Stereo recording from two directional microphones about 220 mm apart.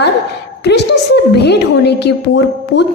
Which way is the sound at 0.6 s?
50° left (ahead or behind).